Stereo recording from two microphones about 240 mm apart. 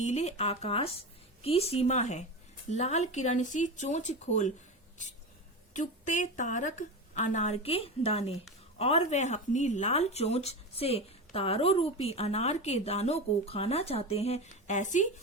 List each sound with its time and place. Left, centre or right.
0.0 s speech: left
5.7 s a woman's voice: left